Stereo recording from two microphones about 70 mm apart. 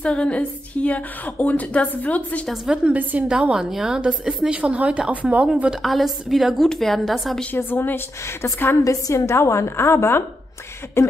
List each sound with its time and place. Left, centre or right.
0.0 s a woman's voice: centre
2.5 s a woman's voice: centre
2.8 s a woman's voice: right
3.3 s a woman's voice: centre
5.8 s a woman's voice: centre
7.5 s a woman's voice: left
8.8 s a woman's voice: left